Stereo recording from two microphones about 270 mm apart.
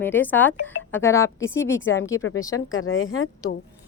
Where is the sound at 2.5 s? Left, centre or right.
Left.